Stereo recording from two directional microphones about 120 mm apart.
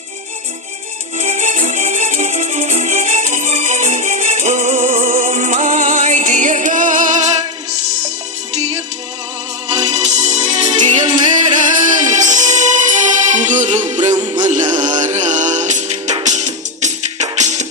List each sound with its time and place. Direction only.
1.2 s music: 70° right (ahead or behind); by 7.3 s 85° right
8.5 s music: 65° right (ahead or behind)
11.3 s music: 90° right